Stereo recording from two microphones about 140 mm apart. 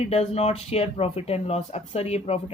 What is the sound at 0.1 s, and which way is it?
Speech, 50° left (ahead or behind).